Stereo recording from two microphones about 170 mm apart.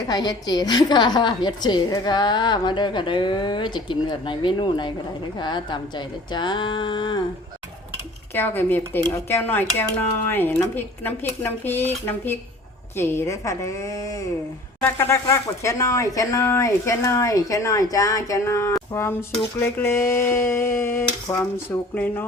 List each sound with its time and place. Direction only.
0.1 s a woman's voice: 25° left (ahead or behind)
8.3 s speech: 10° left (ahead or behind)